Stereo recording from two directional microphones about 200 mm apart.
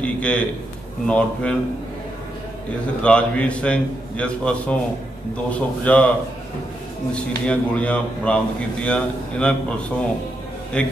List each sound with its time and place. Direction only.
0.0 s a man's voice: 5° left (ahead or behind)
3.0 s a man's voice: 5° left (ahead or behind)
7.2 s a man's voice: 5° left (ahead or behind)
10.8 s a man's voice: 5° left (ahead or behind)